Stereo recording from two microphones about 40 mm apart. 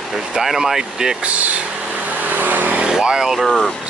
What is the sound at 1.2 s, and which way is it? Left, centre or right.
Speech, right.